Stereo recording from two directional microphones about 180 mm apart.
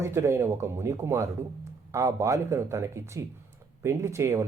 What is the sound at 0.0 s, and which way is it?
Speech, 15° right (ahead or behind).